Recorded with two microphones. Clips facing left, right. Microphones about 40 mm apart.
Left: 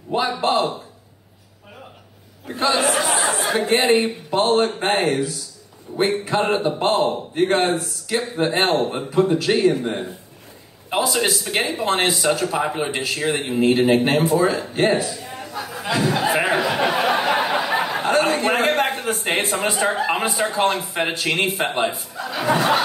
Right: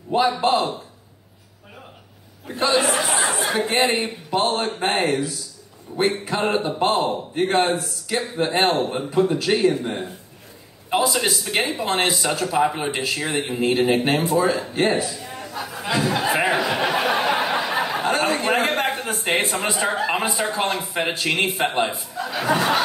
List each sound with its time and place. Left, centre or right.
0.1 s speech: centre
2.4 s a man's voice: centre
3.8 s speech: centre
11.1 s speech: centre
15.0 s a sound: centre
18.8 s a man's voice: centre